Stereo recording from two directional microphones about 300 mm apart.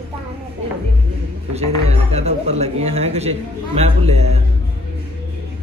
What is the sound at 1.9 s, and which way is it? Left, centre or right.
Speech, right.